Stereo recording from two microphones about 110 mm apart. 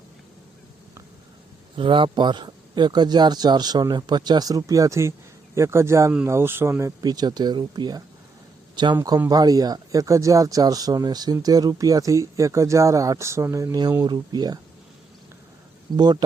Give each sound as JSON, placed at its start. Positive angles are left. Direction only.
{"t": 1.7, "sound": "speech", "side_deg": -50}
{"t": 7.0, "sound": "a man's voice", "side_deg": -40}